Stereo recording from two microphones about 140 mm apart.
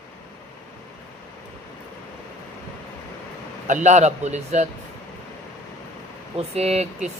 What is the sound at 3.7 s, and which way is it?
Speech, 60° right (ahead or behind).